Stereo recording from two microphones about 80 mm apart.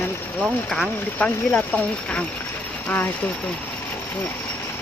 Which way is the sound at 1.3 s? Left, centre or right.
Left.